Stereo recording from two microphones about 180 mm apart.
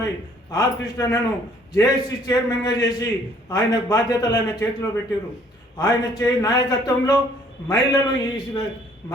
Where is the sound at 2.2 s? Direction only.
20° left (ahead or behind).